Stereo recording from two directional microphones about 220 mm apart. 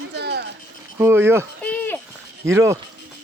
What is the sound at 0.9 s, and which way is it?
Speech, 10° right (ahead or behind).